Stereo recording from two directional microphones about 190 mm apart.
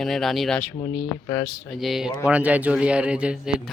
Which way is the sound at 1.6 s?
Centre (ahead or behind).